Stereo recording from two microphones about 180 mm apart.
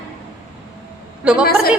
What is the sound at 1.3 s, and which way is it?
Speech, 5° right (ahead or behind).